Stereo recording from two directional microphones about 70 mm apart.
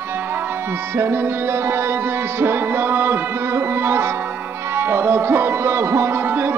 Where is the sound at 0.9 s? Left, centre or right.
Right.